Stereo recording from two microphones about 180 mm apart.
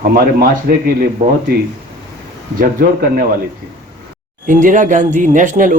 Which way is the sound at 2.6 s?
50° right (ahead or behind).